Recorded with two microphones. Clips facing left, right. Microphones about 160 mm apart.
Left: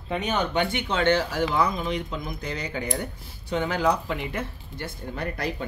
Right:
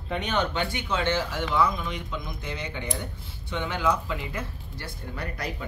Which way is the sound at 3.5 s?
40° left (ahead or behind).